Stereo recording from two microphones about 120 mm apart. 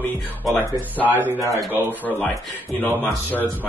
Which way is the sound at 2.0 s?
15° left (ahead or behind).